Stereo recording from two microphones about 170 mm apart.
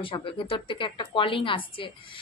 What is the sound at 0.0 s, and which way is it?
A woman's voice, 30° left (ahead or behind).